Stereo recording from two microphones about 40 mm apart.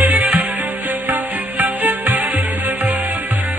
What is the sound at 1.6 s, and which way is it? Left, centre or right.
Music, right.